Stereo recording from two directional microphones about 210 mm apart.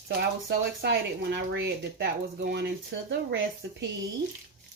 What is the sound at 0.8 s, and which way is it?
Speech, 55° right (ahead or behind).